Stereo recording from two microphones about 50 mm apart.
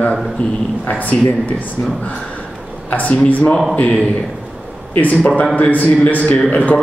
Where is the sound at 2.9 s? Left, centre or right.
Left.